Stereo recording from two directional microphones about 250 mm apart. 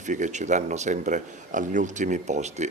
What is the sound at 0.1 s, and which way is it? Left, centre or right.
A man's voice, right.